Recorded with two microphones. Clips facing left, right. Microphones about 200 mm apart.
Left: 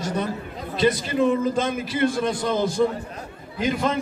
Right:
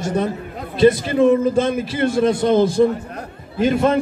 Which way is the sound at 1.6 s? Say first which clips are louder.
Right 3 dB; 25° right (ahead or behind).